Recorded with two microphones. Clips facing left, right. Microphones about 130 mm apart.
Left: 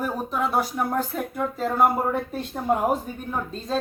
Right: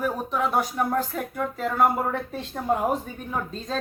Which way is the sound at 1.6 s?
35° left (ahead or behind).